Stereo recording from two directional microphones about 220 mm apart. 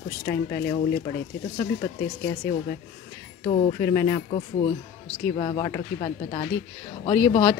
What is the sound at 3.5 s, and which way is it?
A woman's voice, 25° left (ahead or behind).